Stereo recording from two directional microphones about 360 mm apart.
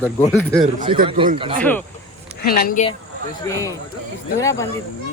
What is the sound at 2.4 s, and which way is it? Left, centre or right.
Speech, left.